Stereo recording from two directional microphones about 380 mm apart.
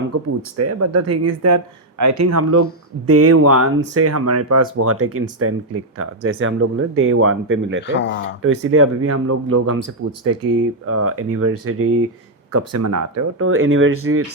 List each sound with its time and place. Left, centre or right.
0.1 s speech: right
7.9 s speech: left
8.4 s speech: right